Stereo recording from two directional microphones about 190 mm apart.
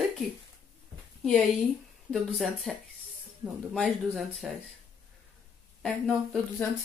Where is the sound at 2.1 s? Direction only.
Centre (ahead or behind).